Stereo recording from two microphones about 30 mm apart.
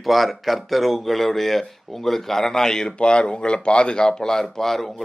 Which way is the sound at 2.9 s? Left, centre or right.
Left.